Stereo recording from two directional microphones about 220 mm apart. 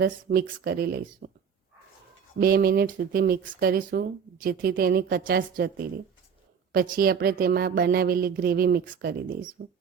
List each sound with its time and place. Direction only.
0.0 s speech: 45° right (ahead or behind)
2.4 s speech: 45° right (ahead or behind)